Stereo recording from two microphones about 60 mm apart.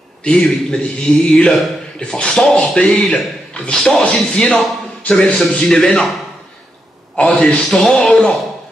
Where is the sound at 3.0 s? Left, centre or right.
Centre.